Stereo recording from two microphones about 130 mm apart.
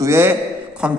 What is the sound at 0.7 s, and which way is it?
Speech, 5° right (ahead or behind).